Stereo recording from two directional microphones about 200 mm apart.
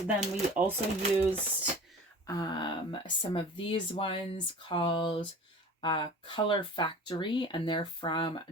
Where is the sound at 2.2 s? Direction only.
20° left (ahead or behind).